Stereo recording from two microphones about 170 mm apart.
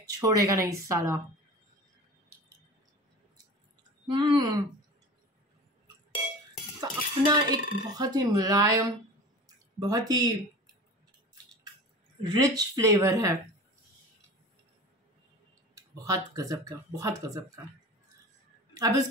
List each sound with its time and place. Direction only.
0.0 s a woman's voice: 20° right (ahead or behind)
4.1 s speech: 25° right (ahead or behind)
6.8 s speech: 25° right (ahead or behind)
12.2 s speech: 25° right (ahead or behind)
15.7 s clicking: 20° right (ahead or behind)
16.3 s speech: 20° right (ahead or behind)
18.7 s a sound: 20° right (ahead or behind)